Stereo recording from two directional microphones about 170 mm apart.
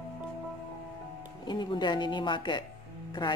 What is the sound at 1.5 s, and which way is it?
Speech, 25° left (ahead or behind).